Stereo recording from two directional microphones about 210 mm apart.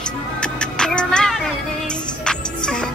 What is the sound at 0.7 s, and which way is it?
Music, 5° left (ahead or behind).